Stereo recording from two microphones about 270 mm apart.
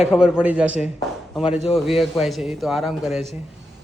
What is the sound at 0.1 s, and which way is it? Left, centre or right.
A man's voice, centre.